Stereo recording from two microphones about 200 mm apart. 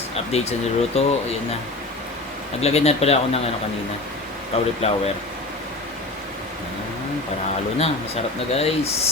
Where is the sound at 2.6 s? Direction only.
30° left (ahead or behind).